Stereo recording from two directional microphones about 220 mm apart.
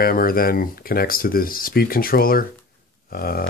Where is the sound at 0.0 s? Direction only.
40° left (ahead or behind).